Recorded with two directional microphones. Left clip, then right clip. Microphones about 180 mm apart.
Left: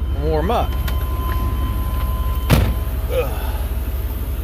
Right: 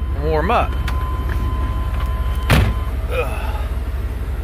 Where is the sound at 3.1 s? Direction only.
35° left (ahead or behind).